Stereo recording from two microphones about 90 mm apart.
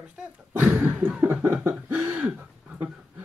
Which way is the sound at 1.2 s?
20° right (ahead or behind).